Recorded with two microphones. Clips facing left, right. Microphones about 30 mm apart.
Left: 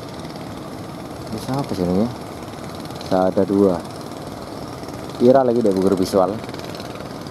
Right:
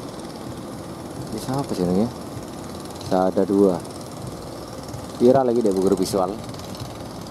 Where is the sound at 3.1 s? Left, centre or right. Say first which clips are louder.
Left 2 dB; left.